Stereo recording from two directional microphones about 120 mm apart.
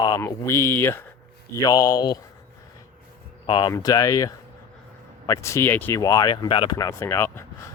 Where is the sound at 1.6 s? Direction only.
30° left (ahead or behind).